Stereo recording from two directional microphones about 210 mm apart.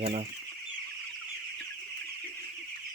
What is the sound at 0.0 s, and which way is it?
Speech, 30° right (ahead or behind).